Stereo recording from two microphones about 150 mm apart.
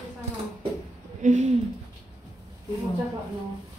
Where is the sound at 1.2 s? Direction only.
55° right (ahead or behind).